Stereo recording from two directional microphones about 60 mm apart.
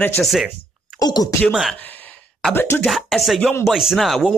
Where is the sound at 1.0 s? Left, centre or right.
Left.